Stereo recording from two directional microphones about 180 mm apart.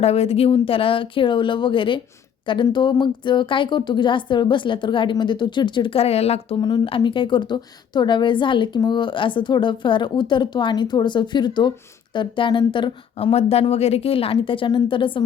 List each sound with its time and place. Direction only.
0.0 s speech: 35° left (ahead or behind)